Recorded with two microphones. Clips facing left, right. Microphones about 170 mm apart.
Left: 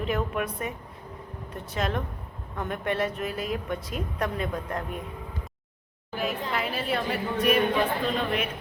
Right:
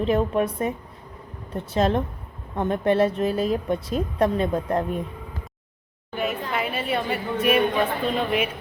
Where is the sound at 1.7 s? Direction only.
30° right (ahead or behind).